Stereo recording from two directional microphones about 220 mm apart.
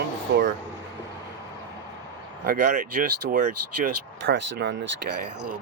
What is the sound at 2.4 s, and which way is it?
Speech, 45° right (ahead or behind).